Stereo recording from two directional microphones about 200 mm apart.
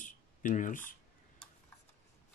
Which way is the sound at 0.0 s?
40° left (ahead or behind).